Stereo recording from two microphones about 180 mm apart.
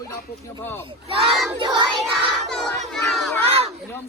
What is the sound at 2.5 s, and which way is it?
Crowd, centre (ahead or behind).